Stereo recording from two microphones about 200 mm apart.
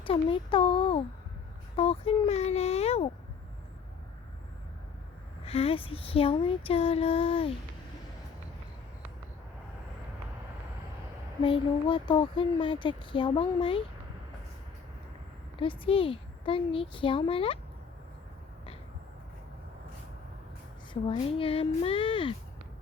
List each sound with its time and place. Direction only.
0.0 s speech: 25° left (ahead or behind)
1.7 s a sound: 30° left (ahead or behind)
5.5 s speech: 30° left (ahead or behind)
11.4 s speech: 25° left (ahead or behind)
15.6 s speech: 25° left (ahead or behind)
20.9 s speech: 25° left (ahead or behind)